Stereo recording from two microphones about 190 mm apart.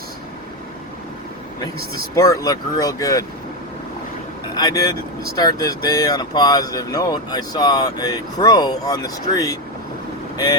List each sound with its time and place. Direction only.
2.1 s speech: 15° left (ahead or behind)
4.5 s speech: 20° left (ahead or behind)